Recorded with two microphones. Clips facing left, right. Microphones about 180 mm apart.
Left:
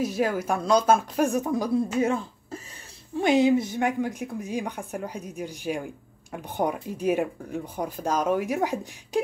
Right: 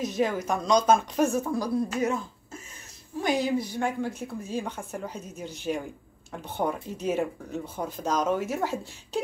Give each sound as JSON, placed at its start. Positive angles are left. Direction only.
{"t": 0.0, "sound": "speech", "side_deg": 10}
{"t": 1.3, "sound": "speech", "side_deg": 20}